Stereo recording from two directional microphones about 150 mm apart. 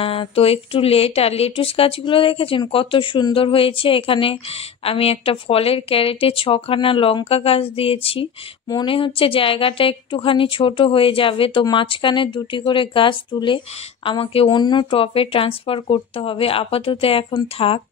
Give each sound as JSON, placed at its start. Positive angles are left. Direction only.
{"t": 0.0, "sound": "speech", "side_deg": 40}